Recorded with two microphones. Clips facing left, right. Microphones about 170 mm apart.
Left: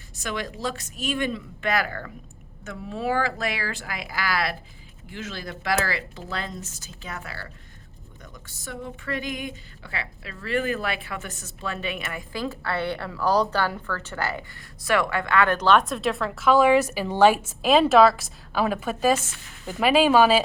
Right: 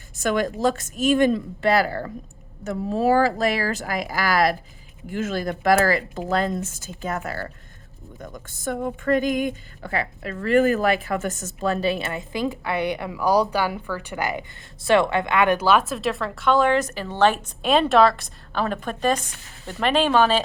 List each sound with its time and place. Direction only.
0.2 s speech: 50° right (ahead or behind); by 12.2 s 30° right (ahead or behind)
12.3 s a woman's voice: 15° right (ahead or behind)
14.8 s a woman's voice: 25° right (ahead or behind); by 20.4 s 10° left (ahead or behind)